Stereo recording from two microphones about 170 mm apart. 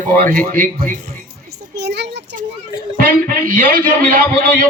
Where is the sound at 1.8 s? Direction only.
75° right (ahead or behind).